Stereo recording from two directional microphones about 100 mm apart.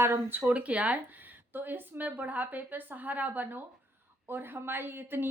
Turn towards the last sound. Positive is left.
turn(degrees=-20)  # may be behind; listen again after turning